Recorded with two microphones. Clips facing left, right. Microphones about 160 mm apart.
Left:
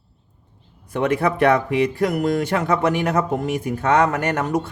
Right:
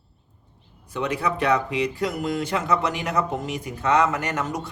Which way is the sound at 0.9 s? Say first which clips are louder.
Left 6 dB; 55° left (ahead or behind).